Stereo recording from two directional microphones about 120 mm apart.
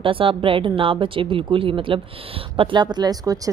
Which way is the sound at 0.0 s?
45° right (ahead or behind).